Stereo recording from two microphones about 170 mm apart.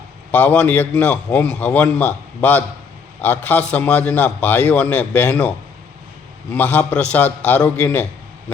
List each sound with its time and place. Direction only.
0.3 s a man's voice: 10° left (ahead or behind)
6.5 s a man's voice: 10° left (ahead or behind)